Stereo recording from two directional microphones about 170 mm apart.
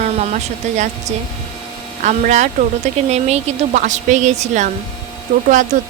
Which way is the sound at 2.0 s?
45° right (ahead or behind).